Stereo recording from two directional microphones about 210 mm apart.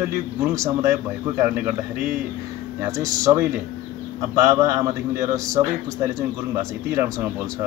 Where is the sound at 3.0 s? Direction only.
15° right (ahead or behind).